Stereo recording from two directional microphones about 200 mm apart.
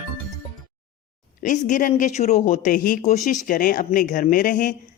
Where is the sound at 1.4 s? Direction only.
40° left (ahead or behind).